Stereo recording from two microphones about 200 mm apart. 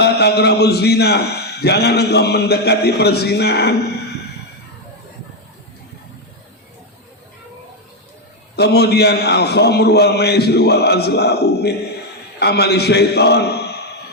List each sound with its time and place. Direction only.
0.0 s a man's voice: 55° left (ahead or behind)
8.5 s a man's voice: 55° left (ahead or behind)